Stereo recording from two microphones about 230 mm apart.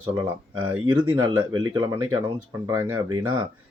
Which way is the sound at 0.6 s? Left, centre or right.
Right.